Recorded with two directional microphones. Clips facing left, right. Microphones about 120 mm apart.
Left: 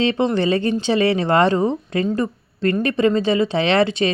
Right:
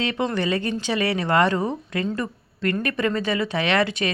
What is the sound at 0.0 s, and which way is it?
Speech, 30° left (ahead or behind).